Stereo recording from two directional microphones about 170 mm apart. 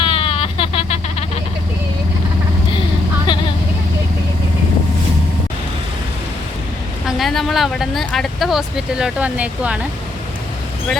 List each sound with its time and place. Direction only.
0.0 s a sound: 30° left (ahead or behind)
3.3 s vehicle: 30° left (ahead or behind)
7.2 s speech: centre (ahead or behind)